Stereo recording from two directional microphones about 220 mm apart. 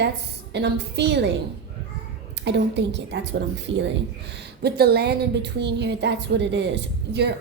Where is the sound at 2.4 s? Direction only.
50° right (ahead or behind).